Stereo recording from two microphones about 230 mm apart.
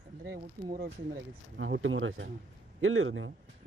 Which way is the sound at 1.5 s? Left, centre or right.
Right.